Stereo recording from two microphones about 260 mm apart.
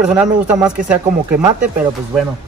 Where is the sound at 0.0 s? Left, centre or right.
Centre.